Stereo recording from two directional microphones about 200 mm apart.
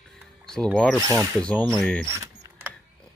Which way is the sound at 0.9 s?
15° right (ahead or behind).